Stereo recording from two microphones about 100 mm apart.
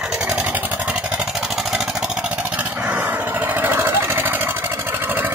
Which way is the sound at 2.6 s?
15° right (ahead or behind).